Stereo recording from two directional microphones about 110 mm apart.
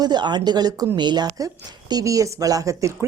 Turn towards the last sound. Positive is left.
turn(degrees=-30)  # may be behind; listen again after turning